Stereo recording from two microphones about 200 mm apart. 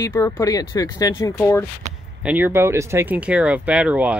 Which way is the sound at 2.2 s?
10° right (ahead or behind).